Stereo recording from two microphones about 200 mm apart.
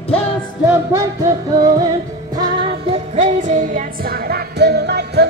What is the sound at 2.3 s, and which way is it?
Music, 30° right (ahead or behind).